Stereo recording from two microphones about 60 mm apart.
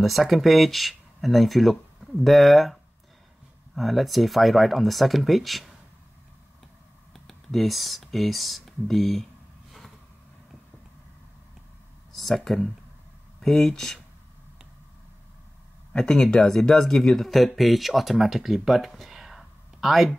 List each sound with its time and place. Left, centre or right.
0.0 s speech: centre
7.2 s speech: centre
12.1 s a sound: centre
12.4 s speech: centre
16.0 s speech: centre